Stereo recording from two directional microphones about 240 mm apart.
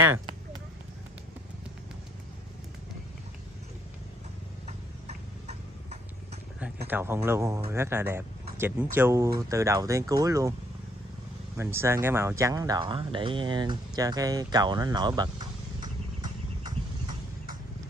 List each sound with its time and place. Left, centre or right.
4.6 s tick-tock: right
6.9 s speech: centre
11.5 s speech: centre